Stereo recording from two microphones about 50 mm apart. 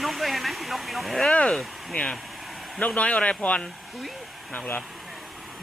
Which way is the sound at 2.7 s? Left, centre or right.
Left.